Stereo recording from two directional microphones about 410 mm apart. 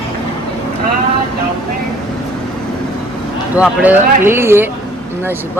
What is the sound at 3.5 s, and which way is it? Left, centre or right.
Speech, centre.